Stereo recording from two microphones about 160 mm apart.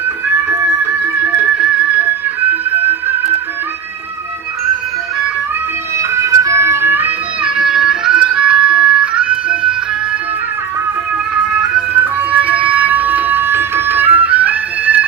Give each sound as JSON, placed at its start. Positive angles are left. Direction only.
{"t": 1.4, "sound": "music", "side_deg": -10}
{"t": 6.0, "sound": "music", "side_deg": -20}
{"t": 12.3, "sound": "music", "side_deg": -10}